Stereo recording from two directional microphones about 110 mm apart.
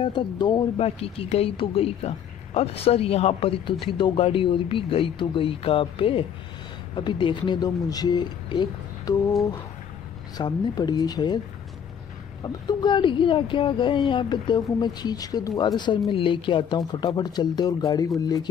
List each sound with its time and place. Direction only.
0.0 s speech: 45° left (ahead or behind)
0.7 s speech: 60° left (ahead or behind); by 9.3 s 35° left (ahead or behind)
10.3 s speech: 40° left (ahead or behind)
12.4 s speech: 40° left (ahead or behind)